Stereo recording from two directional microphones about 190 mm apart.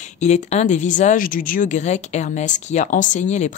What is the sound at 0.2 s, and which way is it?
A woman's voice, 35° left (ahead or behind).